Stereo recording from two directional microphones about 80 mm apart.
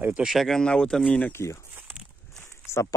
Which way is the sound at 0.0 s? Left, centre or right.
Centre.